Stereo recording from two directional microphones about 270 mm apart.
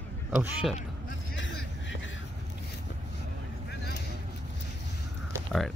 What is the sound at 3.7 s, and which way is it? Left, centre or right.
Vehicle, left.